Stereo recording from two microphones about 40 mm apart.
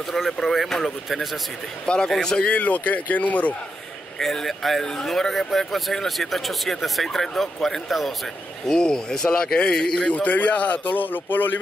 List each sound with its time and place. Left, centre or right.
0.1 s speech: centre
2.5 s speech: left
4.2 s speech: centre
8.6 s speech: centre
10.0 s speech: left
11.0 s speech: left